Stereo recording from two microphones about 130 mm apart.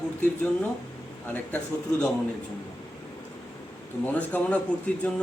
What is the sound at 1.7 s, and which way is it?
Speech, 15° left (ahead or behind).